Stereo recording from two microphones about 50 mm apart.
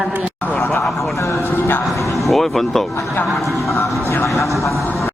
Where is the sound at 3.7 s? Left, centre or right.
Left.